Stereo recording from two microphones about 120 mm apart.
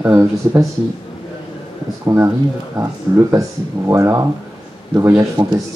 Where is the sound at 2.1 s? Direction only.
25° right (ahead or behind).